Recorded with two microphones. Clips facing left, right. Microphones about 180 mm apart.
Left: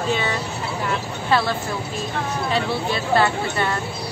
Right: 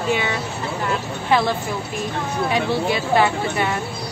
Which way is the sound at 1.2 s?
20° right (ahead or behind).